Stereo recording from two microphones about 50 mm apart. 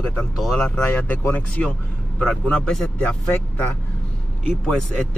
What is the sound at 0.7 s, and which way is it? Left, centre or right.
Speech, left.